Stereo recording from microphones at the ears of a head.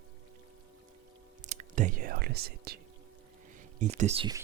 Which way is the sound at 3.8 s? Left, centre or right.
Right.